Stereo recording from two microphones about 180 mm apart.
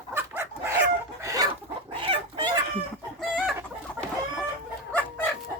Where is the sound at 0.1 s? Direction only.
15° right (ahead or behind).